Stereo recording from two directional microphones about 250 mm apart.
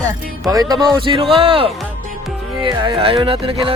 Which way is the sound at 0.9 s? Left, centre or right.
Centre.